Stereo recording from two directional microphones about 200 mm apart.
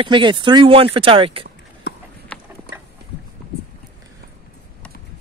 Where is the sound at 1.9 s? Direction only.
60° left (ahead or behind).